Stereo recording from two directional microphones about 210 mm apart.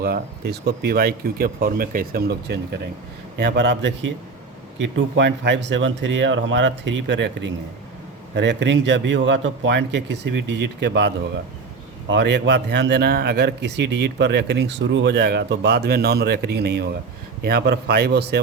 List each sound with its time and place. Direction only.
0.0 s a man's voice: 50° right (ahead or behind)